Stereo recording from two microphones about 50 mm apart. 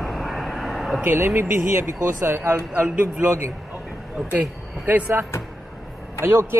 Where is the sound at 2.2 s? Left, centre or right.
Right.